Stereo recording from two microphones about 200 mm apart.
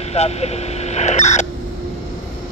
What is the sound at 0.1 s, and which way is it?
Speech, 30° left (ahead or behind).